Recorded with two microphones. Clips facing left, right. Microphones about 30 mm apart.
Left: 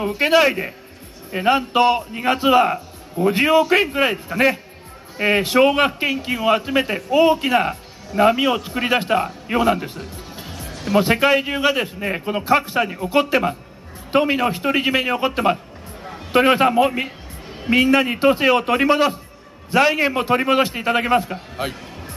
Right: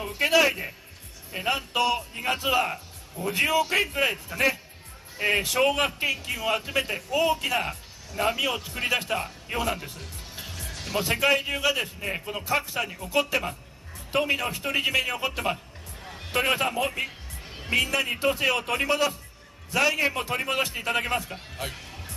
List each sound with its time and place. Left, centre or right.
0.0 s a man's voice: left
9.9 s music: left
10.8 s speech: left
11.1 s a man's voice: left
12.4 s a man's voice: left